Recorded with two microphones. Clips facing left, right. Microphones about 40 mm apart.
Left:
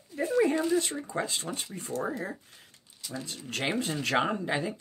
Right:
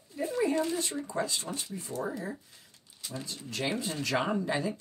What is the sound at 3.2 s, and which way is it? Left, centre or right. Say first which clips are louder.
Speech: left 2 dB; left.